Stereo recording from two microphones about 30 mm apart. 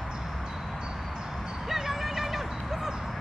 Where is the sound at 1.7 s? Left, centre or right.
Centre.